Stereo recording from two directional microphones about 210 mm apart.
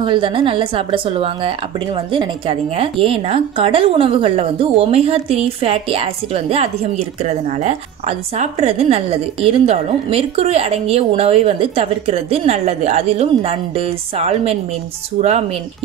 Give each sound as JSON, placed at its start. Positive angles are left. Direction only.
{"t": 0.0, "sound": "a woman's voice", "side_deg": -25}